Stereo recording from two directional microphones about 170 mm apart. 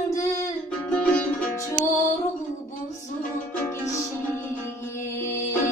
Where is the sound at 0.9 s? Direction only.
5° left (ahead or behind).